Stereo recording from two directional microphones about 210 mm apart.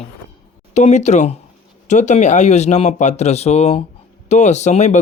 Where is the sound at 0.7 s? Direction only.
35° left (ahead or behind).